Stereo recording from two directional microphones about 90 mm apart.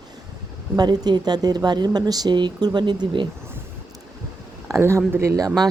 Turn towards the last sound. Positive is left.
turn(degrees=-35)  # may be behind; listen again after turning